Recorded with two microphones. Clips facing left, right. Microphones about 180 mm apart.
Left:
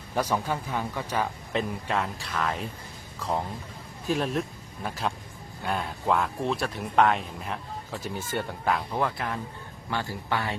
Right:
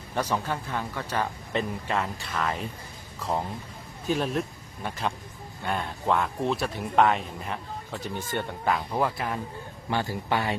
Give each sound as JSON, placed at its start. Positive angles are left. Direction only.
{"t": 0.1, "sound": "speech", "side_deg": 10}
{"t": 1.5, "sound": "speech", "side_deg": 0}